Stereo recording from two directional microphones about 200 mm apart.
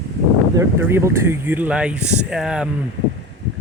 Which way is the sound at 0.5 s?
10° right (ahead or behind).